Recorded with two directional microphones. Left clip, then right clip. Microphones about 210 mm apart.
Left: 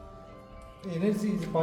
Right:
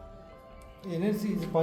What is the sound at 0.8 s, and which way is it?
Speech, 20° right (ahead or behind).